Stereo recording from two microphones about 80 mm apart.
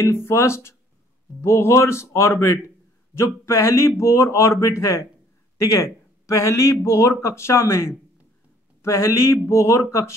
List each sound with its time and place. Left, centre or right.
0.0 s speech: left